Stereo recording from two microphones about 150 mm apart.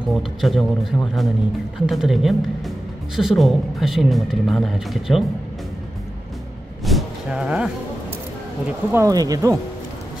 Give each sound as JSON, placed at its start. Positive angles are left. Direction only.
{"t": 0.1, "sound": "speech", "side_deg": 0}
{"t": 6.8, "sound": "a sound", "side_deg": 0}
{"t": 8.9, "sound": "speech", "side_deg": -25}